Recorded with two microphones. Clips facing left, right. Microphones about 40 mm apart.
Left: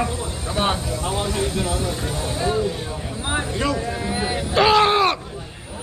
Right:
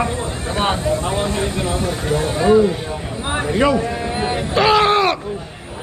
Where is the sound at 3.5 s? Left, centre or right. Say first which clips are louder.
Right 10 dB; right.